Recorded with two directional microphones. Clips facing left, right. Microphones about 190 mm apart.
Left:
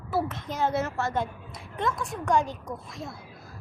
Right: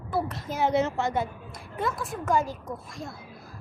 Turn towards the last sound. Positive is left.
turn(degrees=0)  # may be behind; listen again after turning